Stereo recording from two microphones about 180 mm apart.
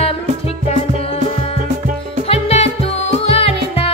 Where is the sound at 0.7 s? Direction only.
35° left (ahead or behind).